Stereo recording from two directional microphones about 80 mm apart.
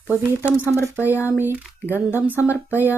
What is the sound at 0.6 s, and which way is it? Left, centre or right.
Speech, left.